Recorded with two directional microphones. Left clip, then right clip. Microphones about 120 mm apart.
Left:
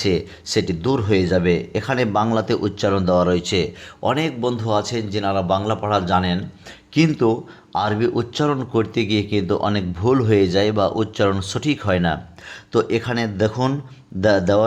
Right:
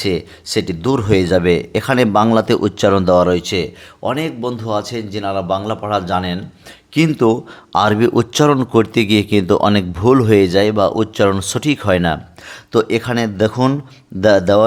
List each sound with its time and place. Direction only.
0.0 s speech: 20° right (ahead or behind)
6.9 s speech: 30° right (ahead or behind)
7.2 s speech: 50° right (ahead or behind); by 14.6 s 35° right (ahead or behind)